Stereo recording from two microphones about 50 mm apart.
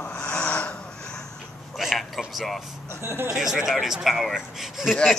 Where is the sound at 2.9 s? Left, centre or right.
Right.